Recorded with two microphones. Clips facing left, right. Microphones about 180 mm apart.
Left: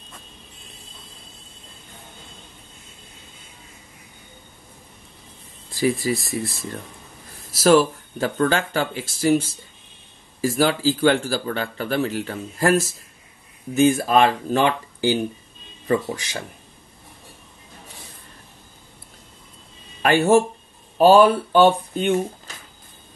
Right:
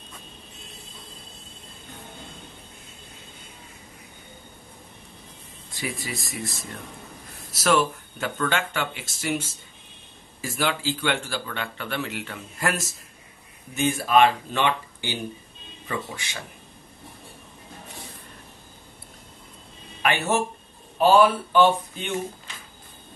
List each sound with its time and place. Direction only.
5.8 s speech: 35° left (ahead or behind)
7.5 s speech: 35° left (ahead or behind)
20.0 s speech: 35° left (ahead or behind)
22.5 s a sound: 40° left (ahead or behind)